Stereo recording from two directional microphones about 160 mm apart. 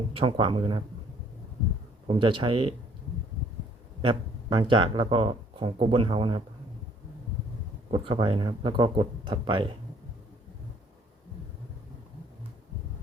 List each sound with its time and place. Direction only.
0.1 s speech: 35° right (ahead or behind)
2.0 s speech: 30° right (ahead or behind)
4.0 s speech: 30° right (ahead or behind)
7.9 s speech: 35° right (ahead or behind)